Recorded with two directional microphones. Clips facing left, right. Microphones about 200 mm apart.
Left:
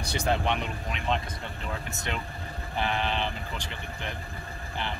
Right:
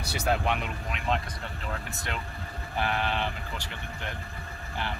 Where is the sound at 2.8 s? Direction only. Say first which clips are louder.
Even; 5° right (ahead or behind).